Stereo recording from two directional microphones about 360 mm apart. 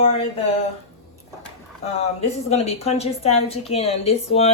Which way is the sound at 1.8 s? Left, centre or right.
Centre.